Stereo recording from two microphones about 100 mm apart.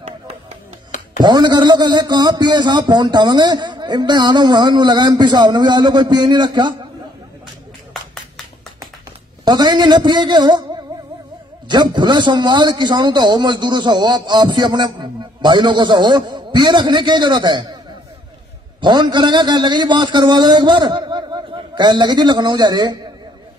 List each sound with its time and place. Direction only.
1.2 s speech: 45° right (ahead or behind)
9.4 s a man's voice: 45° right (ahead or behind)
18.8 s a man's voice: 50° right (ahead or behind)